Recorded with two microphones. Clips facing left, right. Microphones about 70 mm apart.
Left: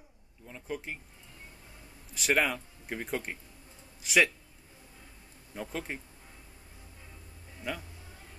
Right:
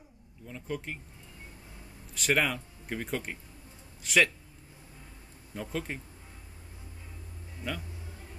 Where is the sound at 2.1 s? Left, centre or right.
Centre.